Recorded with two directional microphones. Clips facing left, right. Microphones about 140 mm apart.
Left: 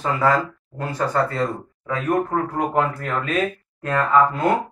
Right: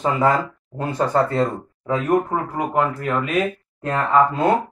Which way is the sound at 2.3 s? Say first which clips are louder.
Left 1 dB; 10° right (ahead or behind).